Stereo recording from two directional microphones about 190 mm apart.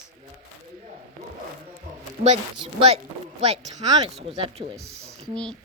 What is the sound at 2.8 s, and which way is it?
A child's voice, 35° right (ahead or behind).